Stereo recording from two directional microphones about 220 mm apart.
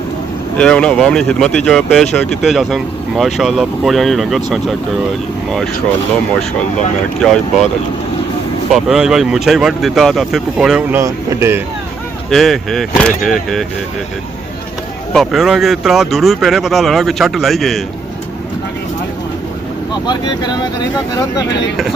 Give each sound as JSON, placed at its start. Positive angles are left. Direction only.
{"t": 0.5, "sound": "speech", "side_deg": 5}
{"t": 7.2, "sound": "speech", "side_deg": 0}
{"t": 8.7, "sound": "speech", "side_deg": 0}
{"t": 12.3, "sound": "speech", "side_deg": 0}
{"t": 15.1, "sound": "speech", "side_deg": 0}
{"t": 20.1, "sound": "speech", "side_deg": 20}